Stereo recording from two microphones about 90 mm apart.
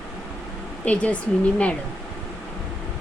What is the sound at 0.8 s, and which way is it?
Speech, 15° left (ahead or behind).